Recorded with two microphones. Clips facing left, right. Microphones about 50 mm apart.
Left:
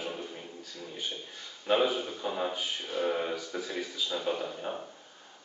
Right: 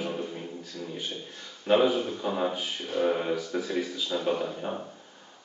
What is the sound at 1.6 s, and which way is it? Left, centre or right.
Speech, centre.